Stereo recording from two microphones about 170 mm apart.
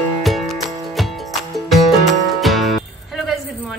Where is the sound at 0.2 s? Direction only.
Centre (ahead or behind).